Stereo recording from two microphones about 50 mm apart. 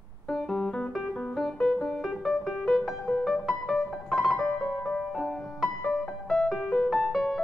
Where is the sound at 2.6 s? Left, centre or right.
Centre.